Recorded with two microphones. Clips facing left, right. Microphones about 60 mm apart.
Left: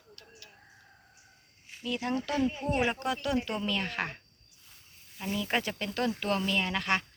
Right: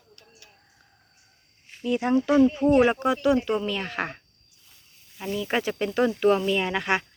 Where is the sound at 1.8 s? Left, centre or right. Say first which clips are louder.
Right 9 dB; right; by 5.8 s centre.